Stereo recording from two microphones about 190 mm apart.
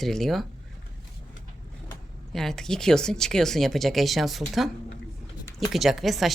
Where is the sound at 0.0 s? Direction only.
Centre (ahead or behind).